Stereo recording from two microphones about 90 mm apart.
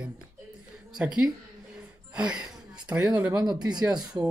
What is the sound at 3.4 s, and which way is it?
Speech, 50° right (ahead or behind).